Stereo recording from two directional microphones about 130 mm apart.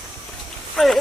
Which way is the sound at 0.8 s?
5° left (ahead or behind).